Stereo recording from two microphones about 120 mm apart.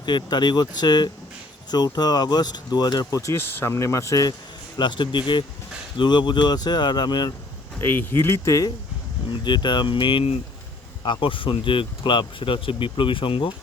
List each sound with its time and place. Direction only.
0.0 s speech: 40° left (ahead or behind)
4.8 s speech: 40° left (ahead or behind)
7.8 s speech: 20° left (ahead or behind)
9.3 s speech: 40° left (ahead or behind)